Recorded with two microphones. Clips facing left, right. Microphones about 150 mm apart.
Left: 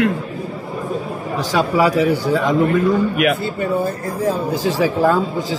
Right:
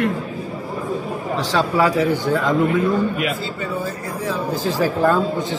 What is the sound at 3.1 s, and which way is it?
Speech, 60° left (ahead or behind).